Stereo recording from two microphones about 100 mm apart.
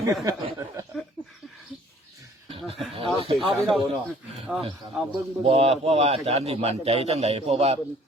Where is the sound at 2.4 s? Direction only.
70° right (ahead or behind).